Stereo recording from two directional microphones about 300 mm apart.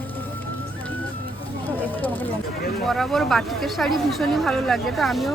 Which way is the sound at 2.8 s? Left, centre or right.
Centre.